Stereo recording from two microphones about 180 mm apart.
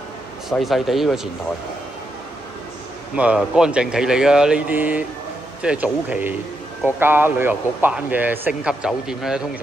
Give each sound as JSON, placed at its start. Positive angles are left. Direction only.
{"t": 0.5, "sound": "speech", "side_deg": 0}
{"t": 3.2, "sound": "speech", "side_deg": -5}